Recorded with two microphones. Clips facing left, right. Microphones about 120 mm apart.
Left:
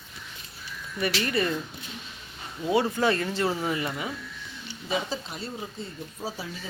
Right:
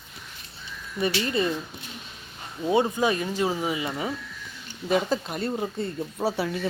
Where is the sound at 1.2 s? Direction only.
20° right (ahead or behind).